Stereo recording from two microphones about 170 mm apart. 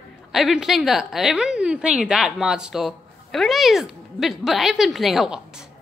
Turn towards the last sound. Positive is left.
turn(degrees=-5)  # may be behind; listen again after turning